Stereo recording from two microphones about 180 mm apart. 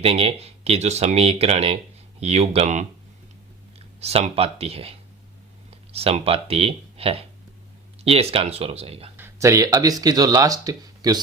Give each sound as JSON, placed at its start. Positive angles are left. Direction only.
{"t": 0.0, "sound": "speech", "side_deg": -35}
{"t": 4.0, "sound": "speech", "side_deg": -35}
{"t": 9.1, "sound": "speech", "side_deg": -15}